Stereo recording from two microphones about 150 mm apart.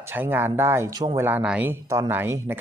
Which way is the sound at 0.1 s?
15° right (ahead or behind).